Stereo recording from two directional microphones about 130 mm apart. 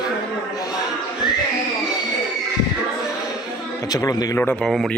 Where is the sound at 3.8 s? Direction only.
30° left (ahead or behind).